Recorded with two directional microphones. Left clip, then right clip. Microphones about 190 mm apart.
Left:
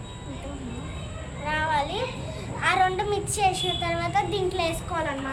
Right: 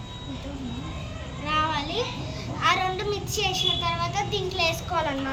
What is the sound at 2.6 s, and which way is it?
Child singing, 40° left (ahead or behind).